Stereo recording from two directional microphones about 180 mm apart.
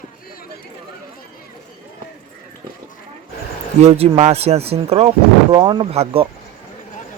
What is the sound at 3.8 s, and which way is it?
Speech, 35° right (ahead or behind).